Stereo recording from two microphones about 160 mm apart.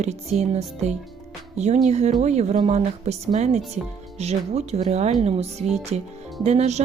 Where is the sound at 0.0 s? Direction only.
45° right (ahead or behind).